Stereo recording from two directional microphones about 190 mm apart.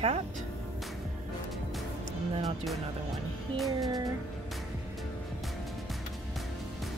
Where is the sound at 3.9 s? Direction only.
20° right (ahead or behind).